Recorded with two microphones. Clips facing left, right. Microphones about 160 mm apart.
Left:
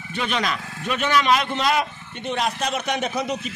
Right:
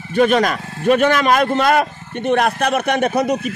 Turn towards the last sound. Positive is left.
turn(degrees=-55)  # may be behind; listen again after turning